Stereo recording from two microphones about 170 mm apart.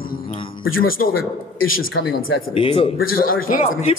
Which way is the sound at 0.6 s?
55° left (ahead or behind).